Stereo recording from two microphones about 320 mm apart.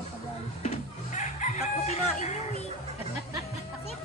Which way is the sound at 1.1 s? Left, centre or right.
Left.